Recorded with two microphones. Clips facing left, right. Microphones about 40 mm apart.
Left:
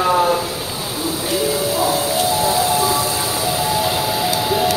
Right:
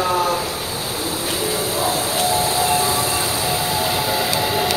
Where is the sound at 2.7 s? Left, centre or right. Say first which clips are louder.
Left 2 dB; right.